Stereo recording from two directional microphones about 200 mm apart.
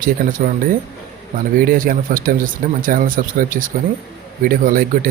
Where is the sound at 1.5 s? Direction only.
45° right (ahead or behind).